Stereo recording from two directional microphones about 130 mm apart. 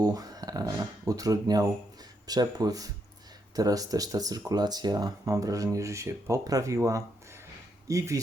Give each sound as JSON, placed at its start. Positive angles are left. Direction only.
{"t": 0.0, "sound": "speech", "side_deg": -30}